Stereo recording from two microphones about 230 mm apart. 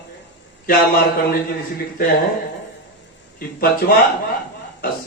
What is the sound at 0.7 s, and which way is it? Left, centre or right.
Speech, left.